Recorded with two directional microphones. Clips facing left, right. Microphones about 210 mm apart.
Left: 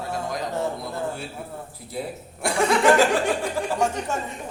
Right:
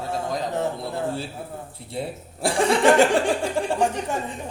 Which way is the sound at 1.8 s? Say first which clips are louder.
Right 1 dB; 25° right (ahead or behind).